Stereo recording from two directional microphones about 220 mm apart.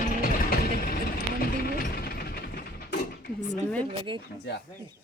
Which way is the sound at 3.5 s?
5° left (ahead or behind).